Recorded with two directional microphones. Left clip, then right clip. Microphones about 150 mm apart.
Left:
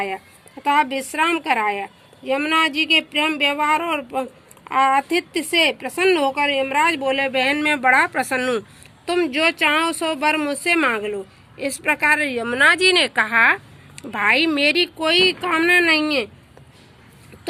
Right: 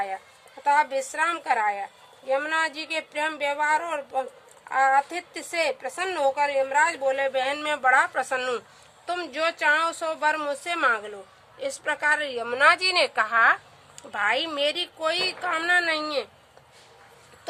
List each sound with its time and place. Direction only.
0.9 s a woman's voice: 20° left (ahead or behind)
1.5 s a woman's voice: 40° left (ahead or behind)
6.4 s speech: 40° left (ahead or behind)
8.4 s a woman's voice: 15° left (ahead or behind)
10.9 s speech: 30° left (ahead or behind)
11.8 s a woman's voice: 20° left (ahead or behind)
14.5 s a woman's voice: 15° left (ahead or behind)